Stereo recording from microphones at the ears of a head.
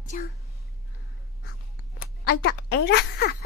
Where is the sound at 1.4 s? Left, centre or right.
Left.